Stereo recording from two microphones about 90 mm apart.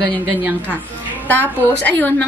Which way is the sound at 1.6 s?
20° left (ahead or behind).